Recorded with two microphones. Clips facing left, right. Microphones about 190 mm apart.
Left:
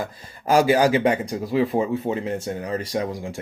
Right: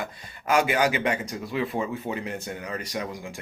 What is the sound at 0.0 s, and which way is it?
Speech, 35° left (ahead or behind).